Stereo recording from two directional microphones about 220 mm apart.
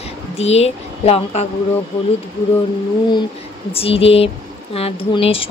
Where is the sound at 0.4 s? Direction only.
30° left (ahead or behind).